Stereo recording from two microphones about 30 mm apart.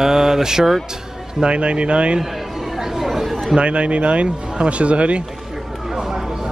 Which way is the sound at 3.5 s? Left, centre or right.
Right.